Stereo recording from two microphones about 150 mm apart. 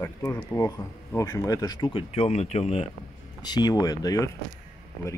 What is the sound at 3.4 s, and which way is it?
Speech, 25° left (ahead or behind).